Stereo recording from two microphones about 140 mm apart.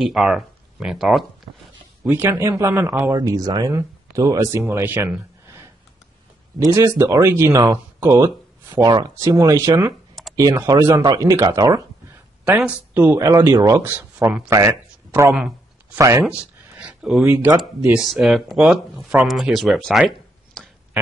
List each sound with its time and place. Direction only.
0.0 s speech: 5° right (ahead or behind)
2.0 s speech: 15° right (ahead or behind)
3.2 s speech: 25° right (ahead or behind)
6.7 s speech: 20° right (ahead or behind)
12.9 s speech: 15° right (ahead or behind)
13.8 s speech: 10° right (ahead or behind)
14.7 s a sound: 15° right (ahead or behind)
15.3 s a sound: 5° right (ahead or behind)
16.0 s speech: 20° right (ahead or behind)
16.3 s a sound: 10° right (ahead or behind)
17.3 s speech: 15° right (ahead or behind)
17.6 s speech: 5° right (ahead or behind)